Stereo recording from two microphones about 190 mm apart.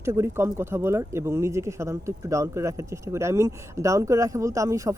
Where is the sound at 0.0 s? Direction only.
15° right (ahead or behind).